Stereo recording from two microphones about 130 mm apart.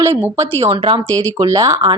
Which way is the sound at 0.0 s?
20° right (ahead or behind).